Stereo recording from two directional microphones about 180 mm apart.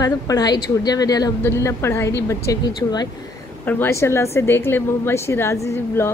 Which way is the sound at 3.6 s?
10° left (ahead or behind).